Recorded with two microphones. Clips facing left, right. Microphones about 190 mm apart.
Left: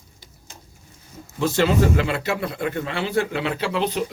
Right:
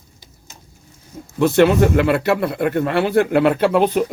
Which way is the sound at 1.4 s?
60° right (ahead or behind).